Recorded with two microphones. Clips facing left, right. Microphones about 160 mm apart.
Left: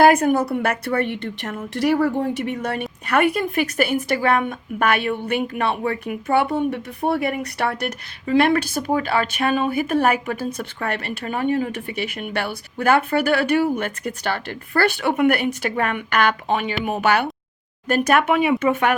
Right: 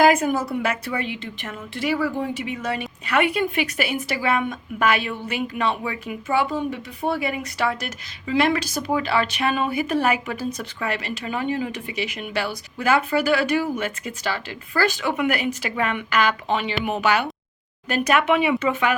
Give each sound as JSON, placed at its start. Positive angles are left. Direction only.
{"t": 0.0, "sound": "a woman's voice", "side_deg": 60}
{"t": 3.1, "sound": "a woman's voice", "side_deg": 50}